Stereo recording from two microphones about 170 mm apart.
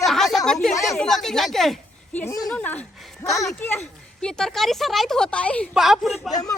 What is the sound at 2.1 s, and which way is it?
Speech, 15° left (ahead or behind).